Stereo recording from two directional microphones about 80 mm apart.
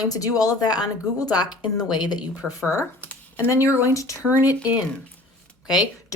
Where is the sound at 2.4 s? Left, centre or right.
Right.